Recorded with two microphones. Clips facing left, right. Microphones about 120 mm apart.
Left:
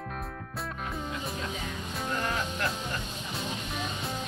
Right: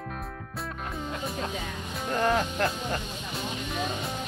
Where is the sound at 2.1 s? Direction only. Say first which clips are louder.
Right 9 dB; 55° right (ahead or behind).